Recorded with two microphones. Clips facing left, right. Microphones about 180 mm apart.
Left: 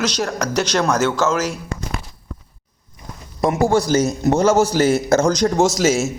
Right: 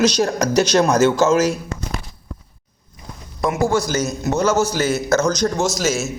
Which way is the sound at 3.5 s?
30° left (ahead or behind).